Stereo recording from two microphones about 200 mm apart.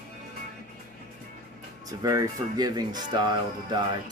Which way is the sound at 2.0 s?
15° right (ahead or behind).